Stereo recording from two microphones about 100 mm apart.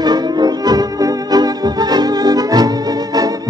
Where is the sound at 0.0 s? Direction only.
45° right (ahead or behind).